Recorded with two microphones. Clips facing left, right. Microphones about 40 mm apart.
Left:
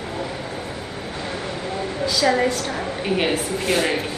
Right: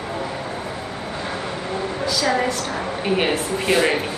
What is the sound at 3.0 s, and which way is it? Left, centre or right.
Speech, centre.